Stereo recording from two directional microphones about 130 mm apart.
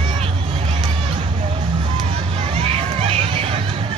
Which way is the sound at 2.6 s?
50° right (ahead or behind).